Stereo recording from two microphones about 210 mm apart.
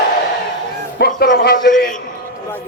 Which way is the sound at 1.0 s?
45° left (ahead or behind).